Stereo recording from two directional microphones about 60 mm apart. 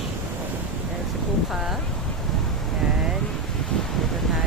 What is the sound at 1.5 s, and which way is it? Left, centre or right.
Speech, centre.